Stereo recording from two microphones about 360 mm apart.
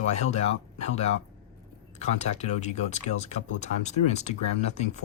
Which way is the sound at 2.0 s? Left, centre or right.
Centre.